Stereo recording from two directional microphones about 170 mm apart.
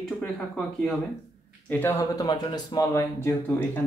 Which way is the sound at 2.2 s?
25° left (ahead or behind).